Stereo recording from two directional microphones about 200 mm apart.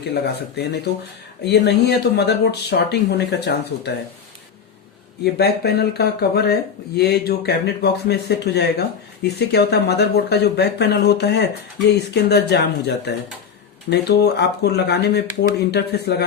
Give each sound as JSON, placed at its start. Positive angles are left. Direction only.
{"t": 0.0, "sound": "speech", "side_deg": 55}
{"t": 5.2, "sound": "speech", "side_deg": 55}